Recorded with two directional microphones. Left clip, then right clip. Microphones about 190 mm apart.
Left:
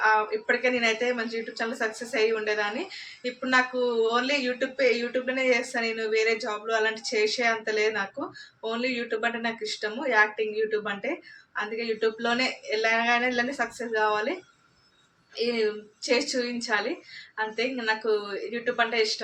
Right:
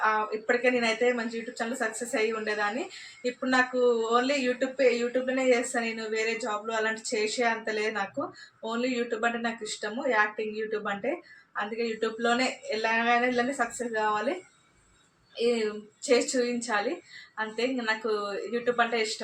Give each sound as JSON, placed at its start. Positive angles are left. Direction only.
{"t": 0.0, "sound": "speech", "side_deg": 5}
{"t": 15.4, "sound": "a woman's voice", "side_deg": 5}